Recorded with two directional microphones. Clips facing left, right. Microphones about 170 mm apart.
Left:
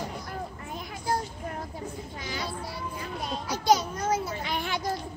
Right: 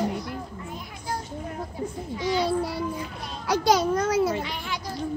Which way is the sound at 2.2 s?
70° right (ahead or behind).